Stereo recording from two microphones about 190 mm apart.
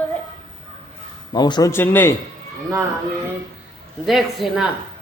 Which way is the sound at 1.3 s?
20° left (ahead or behind).